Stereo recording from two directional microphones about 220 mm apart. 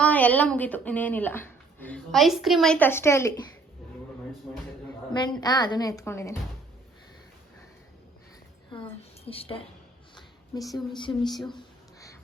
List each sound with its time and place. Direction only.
0.0 s speech: 5° left (ahead or behind)
5.1 s speech: 20° left (ahead or behind)
9.2 s a woman's voice: 25° left (ahead or behind)
10.2 s a sound: 20° left (ahead or behind)
11.1 s speech: 10° left (ahead or behind)
11.4 s a sound: 15° left (ahead or behind)